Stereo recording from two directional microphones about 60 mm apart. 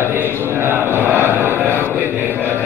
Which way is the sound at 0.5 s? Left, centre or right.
Right.